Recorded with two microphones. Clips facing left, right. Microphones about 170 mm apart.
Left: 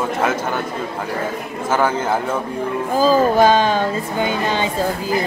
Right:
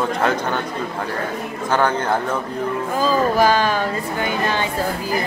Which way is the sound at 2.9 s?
35° left (ahead or behind).